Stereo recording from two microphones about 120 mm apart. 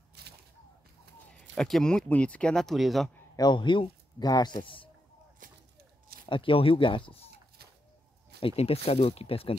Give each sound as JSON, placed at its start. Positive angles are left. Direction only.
{"t": 1.6, "sound": "speech", "side_deg": 5}
{"t": 3.3, "sound": "speech", "side_deg": 40}
{"t": 5.4, "sound": "a sound", "side_deg": -90}
{"t": 6.2, "sound": "speech", "side_deg": 45}
{"t": 8.4, "sound": "speech", "side_deg": 55}